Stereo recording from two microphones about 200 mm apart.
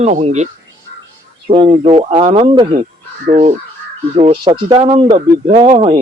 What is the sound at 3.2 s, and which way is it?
Speech, 35° right (ahead or behind).